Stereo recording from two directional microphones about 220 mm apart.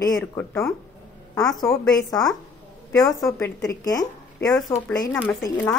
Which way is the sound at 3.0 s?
15° left (ahead or behind).